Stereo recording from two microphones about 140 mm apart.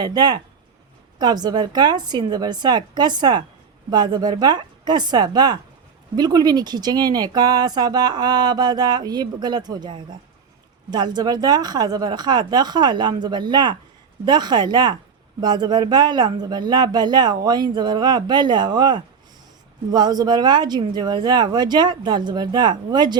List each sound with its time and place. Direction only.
0.0 s speech: 30° right (ahead or behind)